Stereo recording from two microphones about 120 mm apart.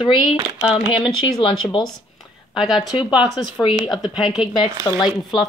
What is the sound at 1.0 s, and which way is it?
Speech, 45° left (ahead or behind).